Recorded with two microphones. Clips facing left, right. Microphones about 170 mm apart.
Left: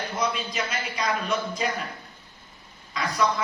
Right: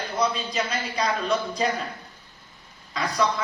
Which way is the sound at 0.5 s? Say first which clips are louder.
Right 3 dB; 35° right (ahead or behind).